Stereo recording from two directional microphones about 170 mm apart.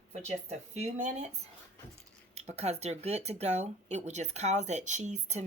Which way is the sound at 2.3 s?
40° right (ahead or behind).